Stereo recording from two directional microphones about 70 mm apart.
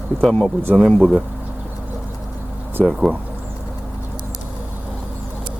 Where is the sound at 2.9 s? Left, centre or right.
Centre.